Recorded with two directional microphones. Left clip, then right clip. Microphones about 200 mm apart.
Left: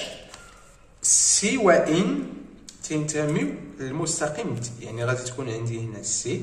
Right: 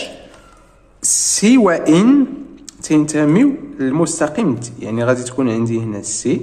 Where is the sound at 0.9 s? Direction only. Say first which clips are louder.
Right 4 dB; 45° right (ahead or behind).